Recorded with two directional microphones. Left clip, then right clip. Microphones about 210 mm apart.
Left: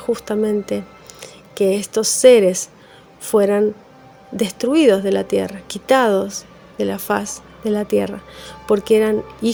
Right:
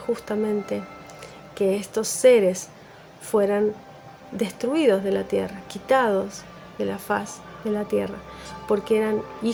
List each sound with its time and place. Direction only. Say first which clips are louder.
0.0 s speech: left 6 dB; 40° left (ahead or behind)